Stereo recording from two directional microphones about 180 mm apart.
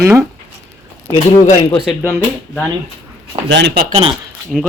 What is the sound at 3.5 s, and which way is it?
Speech, 70° right (ahead or behind).